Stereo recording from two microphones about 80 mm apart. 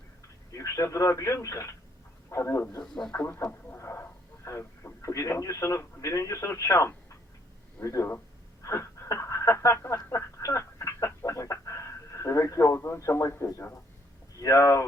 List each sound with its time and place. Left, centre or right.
0.5 s speech: left
2.8 s speech: centre
3.2 s speech: left
10.0 s a sound: left
11.6 s speech: left